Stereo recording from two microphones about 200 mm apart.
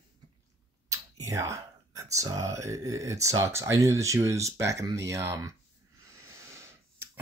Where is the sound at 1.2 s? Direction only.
15° right (ahead or behind).